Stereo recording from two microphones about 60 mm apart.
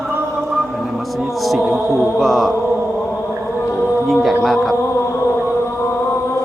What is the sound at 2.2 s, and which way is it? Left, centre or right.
Mantra, centre.